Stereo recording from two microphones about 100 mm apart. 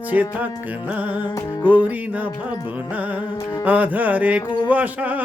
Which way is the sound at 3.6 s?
15° right (ahead or behind).